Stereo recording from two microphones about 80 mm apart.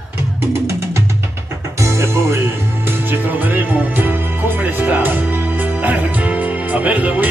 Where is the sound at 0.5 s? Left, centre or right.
Right.